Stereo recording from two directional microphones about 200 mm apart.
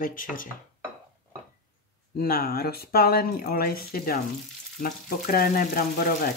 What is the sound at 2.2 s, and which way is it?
Speech, 50° left (ahead or behind).